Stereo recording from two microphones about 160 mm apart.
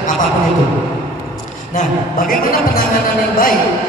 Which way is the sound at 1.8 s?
55° left (ahead or behind).